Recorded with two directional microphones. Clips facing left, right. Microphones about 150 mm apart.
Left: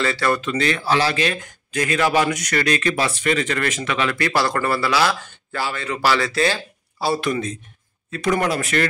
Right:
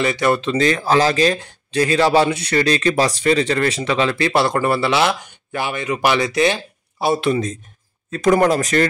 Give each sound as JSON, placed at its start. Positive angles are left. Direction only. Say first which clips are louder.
{"t": 0.0, "sound": "speech", "louder": "right 3 dB", "side_deg": -20}
{"t": 8.1, "sound": "speech", "louder": "right 6 dB", "side_deg": -45}